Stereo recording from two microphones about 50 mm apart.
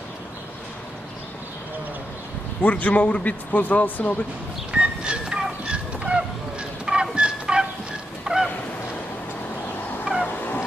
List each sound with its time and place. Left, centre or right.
2.6 s a man's voice: left
4.7 s fowl: centre
6.9 s a sound: centre
8.3 s goose: centre
10.2 s fowl: left